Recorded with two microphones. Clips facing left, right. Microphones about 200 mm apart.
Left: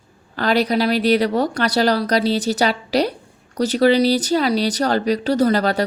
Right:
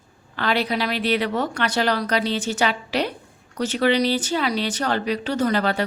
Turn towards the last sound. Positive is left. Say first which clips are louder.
# left 5 dB
turn(degrees=40)  # may be behind; listen again after turning